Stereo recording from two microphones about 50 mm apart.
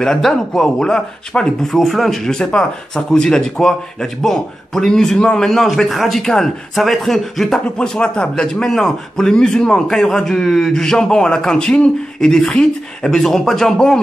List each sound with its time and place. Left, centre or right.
0.0 s speech: centre
1.7 s a man's voice: centre
2.2 s speech: centre
5.5 s a man's voice: centre
7.7 s speech: centre